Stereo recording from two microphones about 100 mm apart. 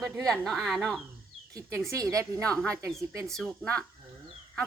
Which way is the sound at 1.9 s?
30° right (ahead or behind).